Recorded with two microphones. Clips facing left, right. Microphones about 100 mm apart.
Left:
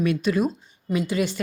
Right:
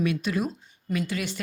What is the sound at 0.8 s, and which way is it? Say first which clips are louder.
Speech: left 5 dB; 15° left (ahead or behind).